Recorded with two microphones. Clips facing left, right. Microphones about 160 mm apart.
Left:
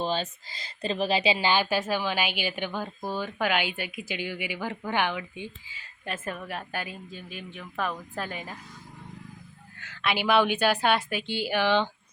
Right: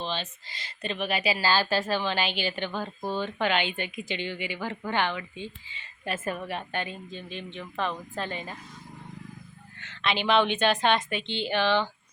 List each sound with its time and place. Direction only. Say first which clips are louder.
0.0 s a sound: left 4 dB; 40° left (ahead or behind)
0.8 s a woman's voice: left 4 dB; 30° left (ahead or behind); by 5.8 s 10° left (ahead or behind)
6.1 s a woman's voice: right 3 dB; 5° right (ahead or behind)
9.9 s a woman's voice: even; 5° left (ahead or behind)